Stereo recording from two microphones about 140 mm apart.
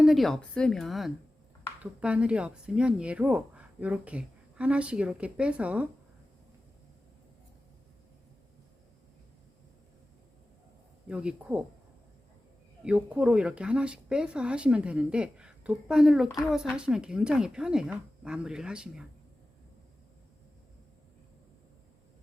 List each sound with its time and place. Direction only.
0.0 s a woman's voice: centre (ahead or behind)
11.1 s a woman's voice: 5° right (ahead or behind)
12.8 s a woman's voice: 10° right (ahead or behind)